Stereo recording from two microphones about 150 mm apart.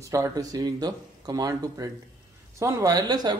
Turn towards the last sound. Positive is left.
turn(degrees=-25)  # may be behind; listen again after turning